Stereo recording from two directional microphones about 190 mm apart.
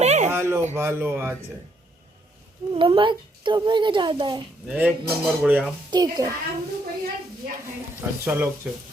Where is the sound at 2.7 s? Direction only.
25° right (ahead or behind).